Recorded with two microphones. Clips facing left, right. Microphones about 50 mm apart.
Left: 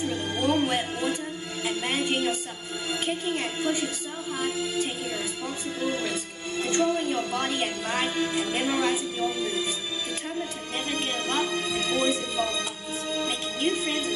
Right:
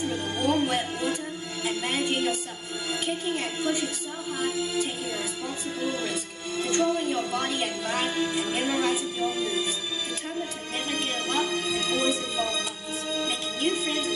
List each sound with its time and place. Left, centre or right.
0.1 s music: left
5.8 s music: left
10.9 s music: left